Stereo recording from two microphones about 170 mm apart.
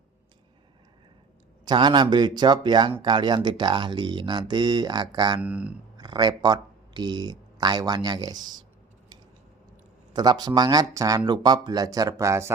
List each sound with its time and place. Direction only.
1.6 s speech: 25° right (ahead or behind)
5.4 s speech: 5° right (ahead or behind)
6.0 s speech: 25° right (ahead or behind)
10.1 s speech: 25° right (ahead or behind)